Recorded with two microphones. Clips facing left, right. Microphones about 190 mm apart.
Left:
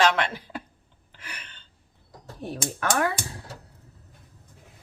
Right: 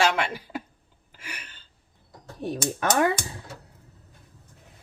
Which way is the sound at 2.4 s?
20° right (ahead or behind).